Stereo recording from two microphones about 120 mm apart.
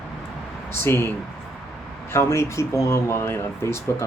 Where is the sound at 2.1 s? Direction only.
25° left (ahead or behind).